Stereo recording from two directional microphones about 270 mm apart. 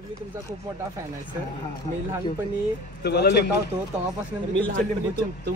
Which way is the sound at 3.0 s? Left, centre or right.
Left.